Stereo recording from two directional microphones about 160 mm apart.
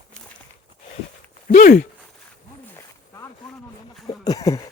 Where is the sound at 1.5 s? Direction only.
60° left (ahead or behind).